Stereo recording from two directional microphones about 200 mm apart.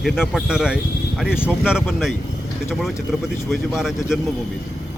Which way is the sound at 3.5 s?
Centre (ahead or behind).